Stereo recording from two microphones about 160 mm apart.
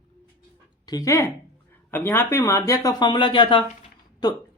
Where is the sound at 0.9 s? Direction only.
20° left (ahead or behind).